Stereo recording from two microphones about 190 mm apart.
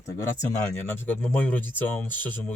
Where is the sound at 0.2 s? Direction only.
10° left (ahead or behind).